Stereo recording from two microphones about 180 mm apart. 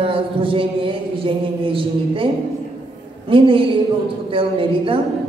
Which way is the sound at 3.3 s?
30° right (ahead or behind).